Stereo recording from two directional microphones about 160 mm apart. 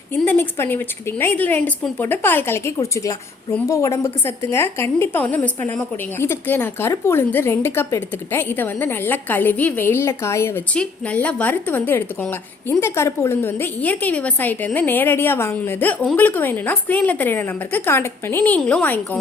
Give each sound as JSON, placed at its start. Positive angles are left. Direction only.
{"t": 0.1, "sound": "a woman's voice", "side_deg": 10}